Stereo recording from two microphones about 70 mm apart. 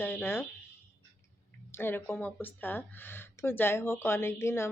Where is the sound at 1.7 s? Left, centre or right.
Left.